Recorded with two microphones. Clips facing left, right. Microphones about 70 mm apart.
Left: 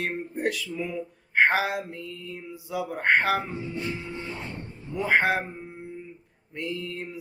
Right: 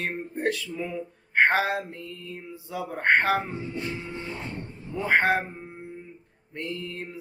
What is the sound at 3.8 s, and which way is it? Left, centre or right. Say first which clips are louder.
Mantra: even; centre.